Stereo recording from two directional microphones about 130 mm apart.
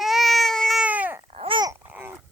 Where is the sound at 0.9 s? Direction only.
10° right (ahead or behind).